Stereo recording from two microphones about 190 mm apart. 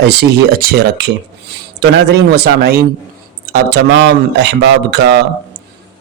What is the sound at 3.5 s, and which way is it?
A man's voice, 70° right (ahead or behind).